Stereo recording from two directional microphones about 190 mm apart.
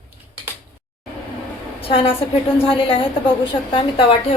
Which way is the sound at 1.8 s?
30° left (ahead or behind).